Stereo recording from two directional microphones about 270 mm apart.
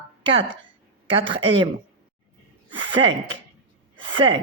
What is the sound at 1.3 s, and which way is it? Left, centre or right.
Speech, centre.